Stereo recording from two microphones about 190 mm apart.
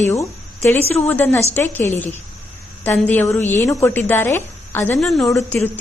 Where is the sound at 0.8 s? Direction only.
35° left (ahead or behind).